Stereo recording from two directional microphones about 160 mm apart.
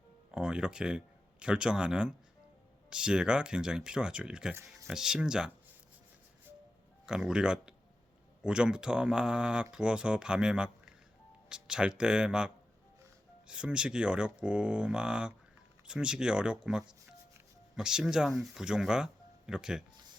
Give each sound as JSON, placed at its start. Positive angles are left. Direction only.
{"t": 0.3, "sound": "speech", "side_deg": -5}
{"t": 4.5, "sound": "speech", "side_deg": -20}
{"t": 4.9, "sound": "speech", "side_deg": -5}
{"t": 7.0, "sound": "speech", "side_deg": -5}
{"t": 13.5, "sound": "speech", "side_deg": -5}